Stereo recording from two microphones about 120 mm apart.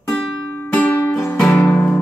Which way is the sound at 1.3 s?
5° left (ahead or behind).